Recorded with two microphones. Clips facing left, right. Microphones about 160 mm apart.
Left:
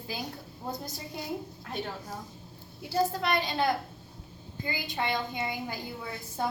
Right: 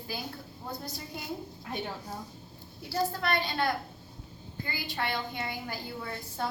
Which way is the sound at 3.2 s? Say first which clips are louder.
Left 1 dB; 20° left (ahead or behind).